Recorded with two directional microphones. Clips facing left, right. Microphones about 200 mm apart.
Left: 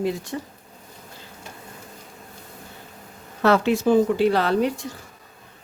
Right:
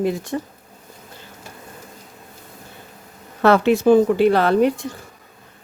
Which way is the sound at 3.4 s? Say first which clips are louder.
Right 4 dB; 60° right (ahead or behind).